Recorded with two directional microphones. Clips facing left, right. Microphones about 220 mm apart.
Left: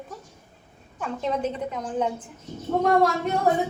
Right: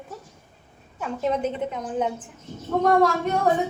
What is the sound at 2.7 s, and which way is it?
Speech, 10° left (ahead or behind).